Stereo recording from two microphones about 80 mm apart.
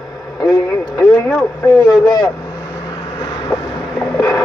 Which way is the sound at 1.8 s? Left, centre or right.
Left.